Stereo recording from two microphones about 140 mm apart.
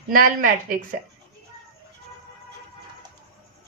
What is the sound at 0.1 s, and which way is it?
Speech, 80° right.